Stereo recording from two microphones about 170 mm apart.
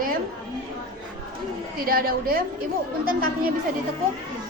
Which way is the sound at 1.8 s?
60° right (ahead or behind).